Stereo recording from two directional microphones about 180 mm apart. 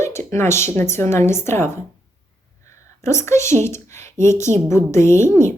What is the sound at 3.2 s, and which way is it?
A woman's voice, 15° left (ahead or behind).